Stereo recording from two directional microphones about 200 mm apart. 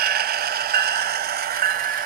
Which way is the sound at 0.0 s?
50° right (ahead or behind).